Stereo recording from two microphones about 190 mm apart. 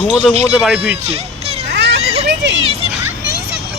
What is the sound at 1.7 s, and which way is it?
Children playing, 65° right (ahead or behind).